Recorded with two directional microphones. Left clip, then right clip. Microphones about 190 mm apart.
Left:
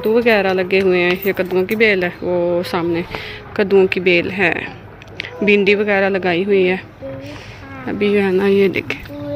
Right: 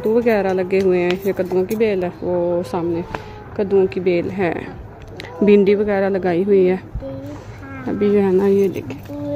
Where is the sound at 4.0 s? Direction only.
5° right (ahead or behind).